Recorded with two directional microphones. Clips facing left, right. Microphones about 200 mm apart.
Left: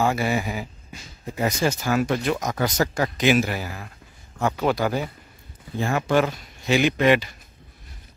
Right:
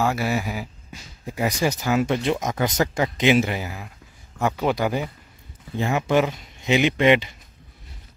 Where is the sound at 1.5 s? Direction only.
15° right (ahead or behind).